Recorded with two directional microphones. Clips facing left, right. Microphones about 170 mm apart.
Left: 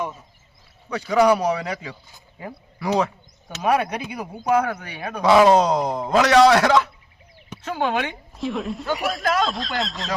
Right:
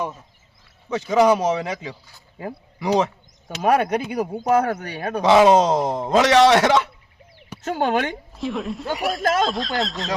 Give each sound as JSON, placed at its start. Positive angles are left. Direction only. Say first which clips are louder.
{"t": 1.1, "sound": "a man's voice", "louder": "right 1 dB", "side_deg": -20}
{"t": 3.6, "sound": "speech", "louder": "right 3 dB", "side_deg": -45}
{"t": 5.2, "sound": "a man's voice", "louder": "right 1 dB", "side_deg": -20}
{"t": 7.6, "sound": "speech", "louder": "right 2 dB", "side_deg": -45}
{"t": 8.4, "sound": "speech", "louder": "left 1 dB", "side_deg": 0}